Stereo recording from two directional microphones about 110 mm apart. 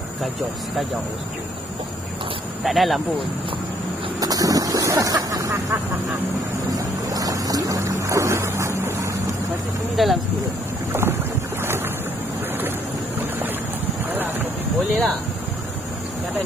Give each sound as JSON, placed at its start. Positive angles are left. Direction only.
{"t": 2.6, "sound": "speech", "side_deg": 0}
{"t": 4.2, "sound": "vehicle", "side_deg": -35}
{"t": 6.7, "sound": "boat", "side_deg": -30}
{"t": 10.0, "sound": "speech", "side_deg": 0}
{"t": 10.9, "sound": "boat", "side_deg": -25}
{"t": 14.9, "sound": "speech", "side_deg": 5}